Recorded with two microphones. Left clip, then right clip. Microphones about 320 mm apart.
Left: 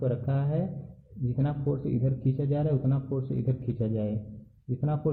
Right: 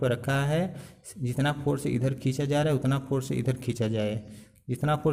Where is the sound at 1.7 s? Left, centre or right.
Right.